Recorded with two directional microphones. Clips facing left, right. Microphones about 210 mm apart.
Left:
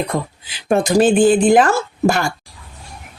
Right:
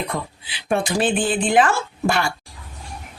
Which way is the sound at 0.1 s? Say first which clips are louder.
Left 5 dB; 45° left (ahead or behind).